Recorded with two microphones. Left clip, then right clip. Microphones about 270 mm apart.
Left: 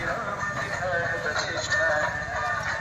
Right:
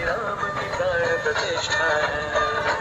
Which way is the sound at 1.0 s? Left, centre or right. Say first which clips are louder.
Right 5 dB; right.